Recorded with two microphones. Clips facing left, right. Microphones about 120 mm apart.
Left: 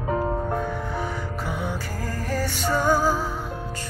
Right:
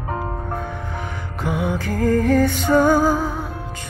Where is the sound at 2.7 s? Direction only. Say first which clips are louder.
Right 6 dB; 50° right (ahead or behind).